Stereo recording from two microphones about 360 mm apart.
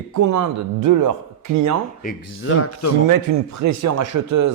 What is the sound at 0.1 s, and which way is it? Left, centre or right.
A man's voice, right.